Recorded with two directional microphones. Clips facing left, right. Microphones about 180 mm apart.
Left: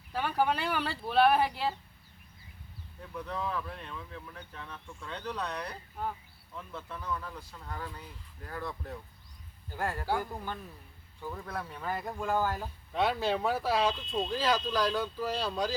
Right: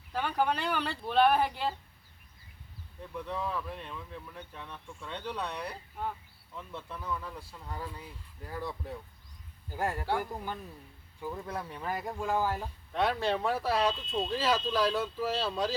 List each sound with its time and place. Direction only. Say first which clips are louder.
0.1 s speech: left 1 dB; 5° left (ahead or behind)
3.2 s speech: even; 5° right (ahead or behind)
9.7 s speech: right 1 dB; 15° right (ahead or behind)